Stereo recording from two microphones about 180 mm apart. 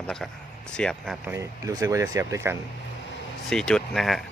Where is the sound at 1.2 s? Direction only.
15° right (ahead or behind).